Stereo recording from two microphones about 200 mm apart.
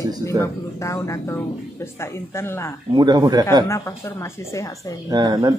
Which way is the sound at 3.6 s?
15° left (ahead or behind).